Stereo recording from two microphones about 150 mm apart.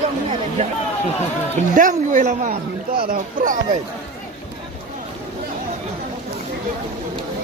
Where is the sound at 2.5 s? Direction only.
75° right (ahead or behind).